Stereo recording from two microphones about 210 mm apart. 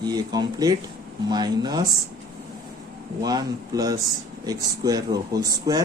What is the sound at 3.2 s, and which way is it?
A man's voice, 20° right (ahead or behind).